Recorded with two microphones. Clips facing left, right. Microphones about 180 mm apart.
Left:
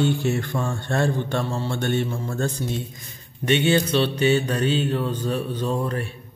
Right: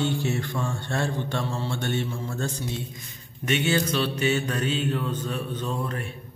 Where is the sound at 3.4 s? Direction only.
30° left (ahead or behind).